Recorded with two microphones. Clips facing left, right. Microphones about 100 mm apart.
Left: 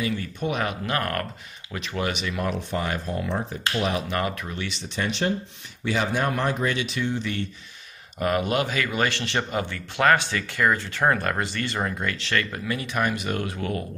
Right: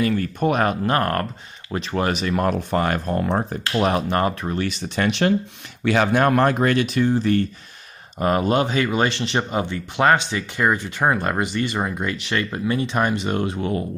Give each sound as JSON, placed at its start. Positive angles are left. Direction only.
{"t": 0.0, "sound": "speech", "side_deg": -50}
{"t": 4.2, "sound": "speech", "side_deg": -35}